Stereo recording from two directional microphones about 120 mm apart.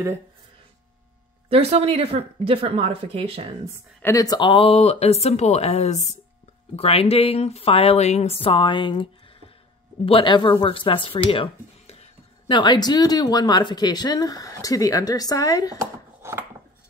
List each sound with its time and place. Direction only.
1.5 s speech: 60° right (ahead or behind)
4.0 s speech: 30° left (ahead or behind)
4.5 s speech: 50° left (ahead or behind)
6.8 s speech: 55° left (ahead or behind)
12.4 s speech: 40° left (ahead or behind)
15.8 s a sound: 20° right (ahead or behind)